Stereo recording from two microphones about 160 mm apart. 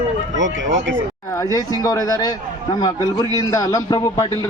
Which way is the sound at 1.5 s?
20° left (ahead or behind).